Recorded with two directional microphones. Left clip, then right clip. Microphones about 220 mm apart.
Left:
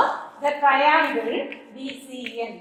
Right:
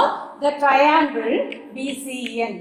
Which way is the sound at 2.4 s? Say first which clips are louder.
Right 6 dB; 45° right (ahead or behind).